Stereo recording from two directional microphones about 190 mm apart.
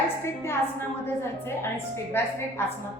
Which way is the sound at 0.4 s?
10° left (ahead or behind).